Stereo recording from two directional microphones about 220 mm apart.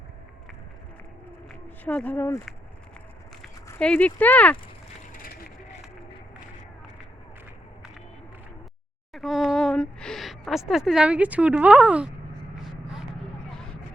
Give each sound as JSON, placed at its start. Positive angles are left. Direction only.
{"t": 1.8, "sound": "speech", "side_deg": 5}
{"t": 3.7, "sound": "speech", "side_deg": 5}
{"t": 5.1, "sound": "vehicle", "side_deg": 40}
{"t": 9.1, "sound": "speech", "side_deg": 0}